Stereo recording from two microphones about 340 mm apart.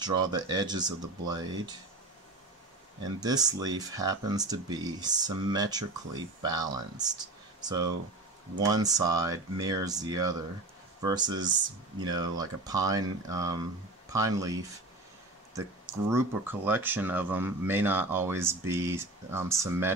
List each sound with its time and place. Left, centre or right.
0.0 s speech: centre
3.2 s speech: centre
15.5 s speech: centre